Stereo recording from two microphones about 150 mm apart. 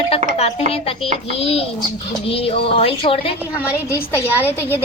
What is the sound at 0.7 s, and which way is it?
Speech, 40° left (ahead or behind).